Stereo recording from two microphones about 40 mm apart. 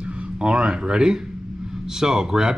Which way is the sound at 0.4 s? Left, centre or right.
Right.